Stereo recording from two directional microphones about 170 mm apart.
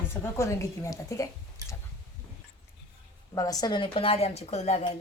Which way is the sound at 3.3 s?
20° left (ahead or behind).